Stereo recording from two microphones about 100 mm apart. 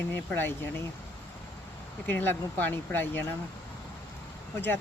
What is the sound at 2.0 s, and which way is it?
Speech, 20° left (ahead or behind).